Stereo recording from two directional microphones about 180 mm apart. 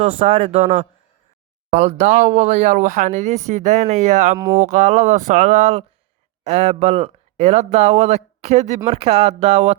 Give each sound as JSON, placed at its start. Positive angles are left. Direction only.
{"t": 0.2, "sound": "speech", "side_deg": -30}
{"t": 1.7, "sound": "speech", "side_deg": -35}
{"t": 4.4, "sound": "speech", "side_deg": -20}
{"t": 4.6, "sound": "speech", "side_deg": -40}